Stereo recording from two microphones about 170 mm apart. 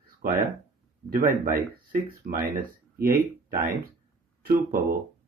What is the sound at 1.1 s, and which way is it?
Speech, 55° right (ahead or behind).